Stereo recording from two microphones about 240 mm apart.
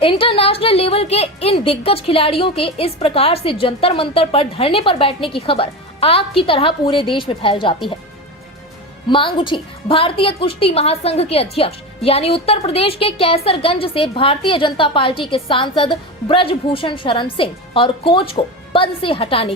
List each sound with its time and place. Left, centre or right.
0.0 s a woman's voice: left
9.0 s a woman's voice: left